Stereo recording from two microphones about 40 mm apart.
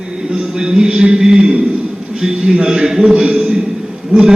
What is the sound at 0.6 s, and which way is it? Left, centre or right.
Speech, right.